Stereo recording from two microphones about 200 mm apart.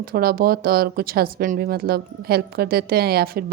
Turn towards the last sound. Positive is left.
turn(degrees=-50)  # may be behind; listen again after turning